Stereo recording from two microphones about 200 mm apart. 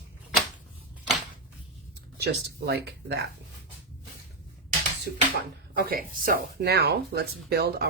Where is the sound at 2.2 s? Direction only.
55° right (ahead or behind).